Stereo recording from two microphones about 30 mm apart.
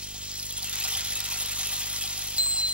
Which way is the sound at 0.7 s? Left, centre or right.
Right.